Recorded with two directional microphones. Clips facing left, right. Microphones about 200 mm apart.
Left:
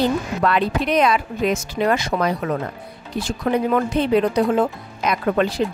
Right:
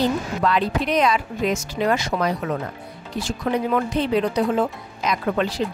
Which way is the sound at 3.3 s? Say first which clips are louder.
Left 3 dB; 55° left (ahead or behind).